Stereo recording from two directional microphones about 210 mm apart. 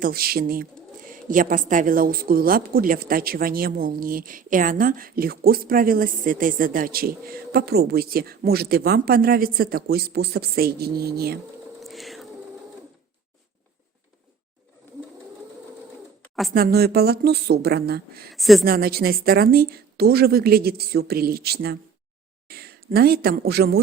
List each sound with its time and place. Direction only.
0.0 s speech: 45° right (ahead or behind)
11.8 s a sound: centre (ahead or behind)
16.6 s speech: 45° right (ahead or behind)
18.3 s a woman's voice: centre (ahead or behind)
18.6 s speech: 45° right (ahead or behind)